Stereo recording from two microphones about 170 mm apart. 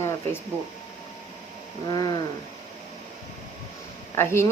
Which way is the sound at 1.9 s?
25° left (ahead or behind).